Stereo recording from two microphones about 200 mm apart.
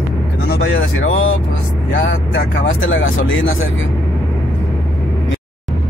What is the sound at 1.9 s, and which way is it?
Speech, 65° left (ahead or behind).